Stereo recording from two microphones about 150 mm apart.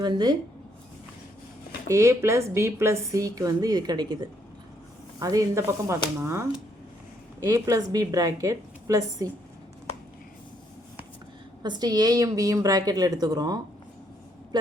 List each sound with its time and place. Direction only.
0.0 s a woman's voice: 30° right (ahead or behind)
1.9 s a woman's voice: 20° right (ahead or behind)
11.6 s a woman's voice: 30° right (ahead or behind)